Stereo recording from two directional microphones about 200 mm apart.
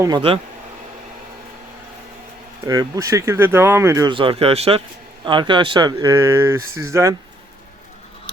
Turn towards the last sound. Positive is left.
turn(degrees=-15)  # may be behind; listen again after turning